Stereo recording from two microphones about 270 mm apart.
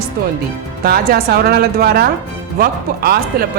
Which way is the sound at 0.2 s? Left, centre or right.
Right.